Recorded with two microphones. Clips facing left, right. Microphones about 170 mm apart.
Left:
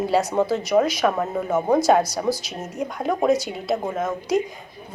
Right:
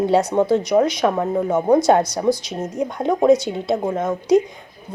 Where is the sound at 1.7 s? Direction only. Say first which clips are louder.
Right 3 dB; 5° left (ahead or behind).